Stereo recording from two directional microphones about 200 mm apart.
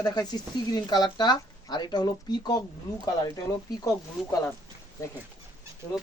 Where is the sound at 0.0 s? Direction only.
20° left (ahead or behind).